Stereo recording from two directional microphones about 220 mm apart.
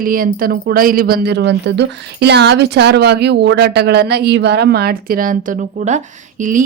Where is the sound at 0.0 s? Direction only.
40° right (ahead or behind).